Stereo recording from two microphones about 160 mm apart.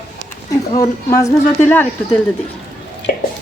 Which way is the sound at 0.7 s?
20° left (ahead or behind).